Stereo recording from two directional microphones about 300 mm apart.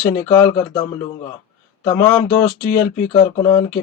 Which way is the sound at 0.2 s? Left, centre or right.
Centre.